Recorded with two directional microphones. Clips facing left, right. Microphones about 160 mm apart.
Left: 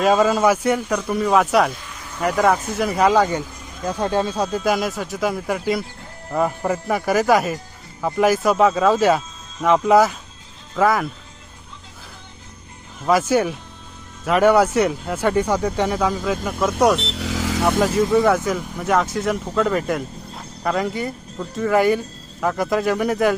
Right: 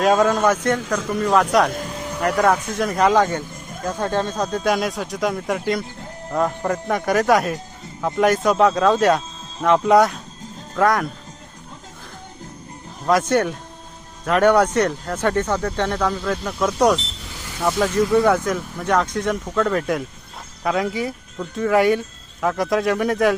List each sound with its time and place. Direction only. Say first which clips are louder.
0.0 s speech: even; centre (ahead or behind)
1.7 s a sound: right 9 dB; 40° right (ahead or behind)
2.2 s speech: even; 5° left (ahead or behind)
13.1 s speech: even; 5° left (ahead or behind)
17.0 s vehicle: left 12 dB; 75° left (ahead or behind); by 17.7 s 90° left
17.7 s speech: even; 5° left (ahead or behind)